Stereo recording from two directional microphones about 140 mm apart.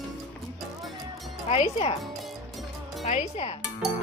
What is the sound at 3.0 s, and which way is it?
Speech, 55° left (ahead or behind).